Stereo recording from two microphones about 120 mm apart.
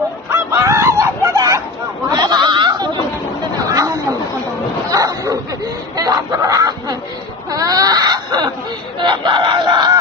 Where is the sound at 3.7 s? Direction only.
30° right (ahead or behind).